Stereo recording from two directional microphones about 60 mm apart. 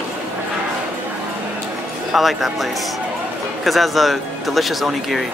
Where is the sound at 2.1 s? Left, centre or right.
Centre.